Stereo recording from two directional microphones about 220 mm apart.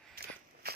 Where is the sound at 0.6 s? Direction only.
45° right (ahead or behind).